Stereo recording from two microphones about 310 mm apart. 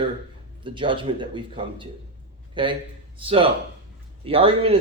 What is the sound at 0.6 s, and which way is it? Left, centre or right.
Speech, centre.